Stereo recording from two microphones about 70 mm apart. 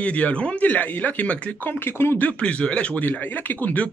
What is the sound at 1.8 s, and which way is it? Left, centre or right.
Speech, left.